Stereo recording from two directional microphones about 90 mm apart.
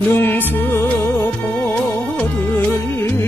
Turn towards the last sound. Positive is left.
turn(degrees=20)  # may be behind; listen again after turning